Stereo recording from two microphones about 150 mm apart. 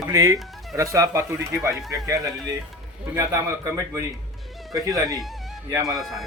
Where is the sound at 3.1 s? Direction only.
20° right (ahead or behind).